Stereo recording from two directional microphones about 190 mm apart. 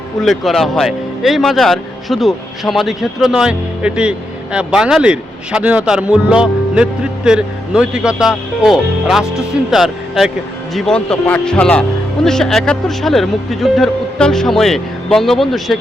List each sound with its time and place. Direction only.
0.2 s a man's voice: centre (ahead or behind)